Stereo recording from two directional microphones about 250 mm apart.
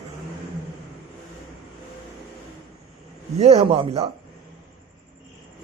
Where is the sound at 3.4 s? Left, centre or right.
Right.